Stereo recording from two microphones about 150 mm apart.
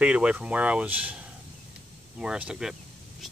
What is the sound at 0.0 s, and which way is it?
Speech, 10° right (ahead or behind).